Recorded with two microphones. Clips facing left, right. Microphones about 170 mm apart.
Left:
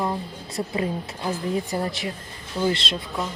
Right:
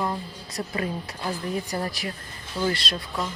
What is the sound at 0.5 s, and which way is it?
Speech, 20° left (ahead or behind).